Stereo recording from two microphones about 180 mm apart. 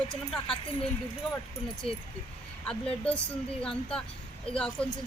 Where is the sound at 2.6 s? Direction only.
5° left (ahead or behind).